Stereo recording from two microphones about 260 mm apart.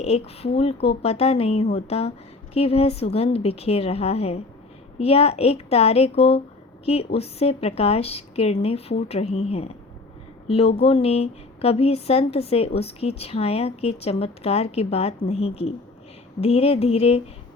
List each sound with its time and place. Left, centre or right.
0.0 s speech: left